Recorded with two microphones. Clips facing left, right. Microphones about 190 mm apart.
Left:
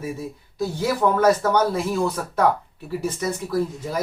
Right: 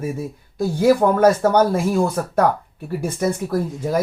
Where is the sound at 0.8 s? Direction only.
50° right (ahead or behind).